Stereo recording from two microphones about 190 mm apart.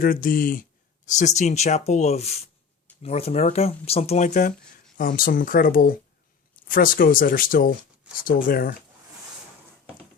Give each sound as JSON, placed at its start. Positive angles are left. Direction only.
{"t": 0.0, "sound": "speech", "side_deg": 45}